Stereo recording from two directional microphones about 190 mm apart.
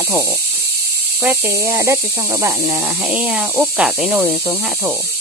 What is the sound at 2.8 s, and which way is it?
Speech, 5° right (ahead or behind).